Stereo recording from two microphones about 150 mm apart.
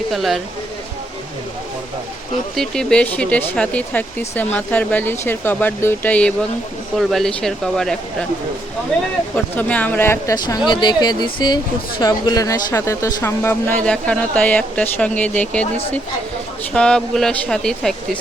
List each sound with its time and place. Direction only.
0.1 s speech: centre (ahead or behind)
2.6 s speech: 5° left (ahead or behind)
9.3 s speech: 10° left (ahead or behind)
10.3 s speech: 30° left (ahead or behind); by 15.6 s 10° left (ahead or behind)
16.7 s speech: 5° left (ahead or behind)